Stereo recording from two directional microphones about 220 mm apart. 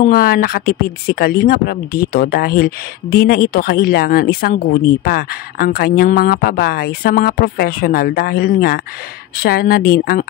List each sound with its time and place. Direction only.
0.0 s speech: 45° left (ahead or behind)